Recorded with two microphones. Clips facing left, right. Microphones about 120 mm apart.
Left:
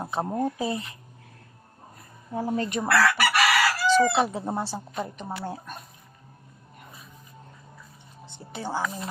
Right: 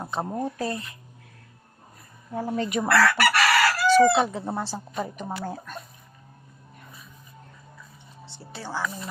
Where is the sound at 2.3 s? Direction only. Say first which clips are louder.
Left 1 dB; 10° left (ahead or behind).